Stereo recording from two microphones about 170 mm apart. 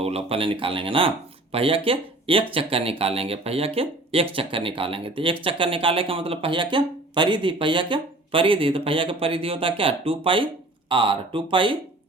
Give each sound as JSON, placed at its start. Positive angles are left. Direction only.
{"t": 0.0, "sound": "speech", "side_deg": -35}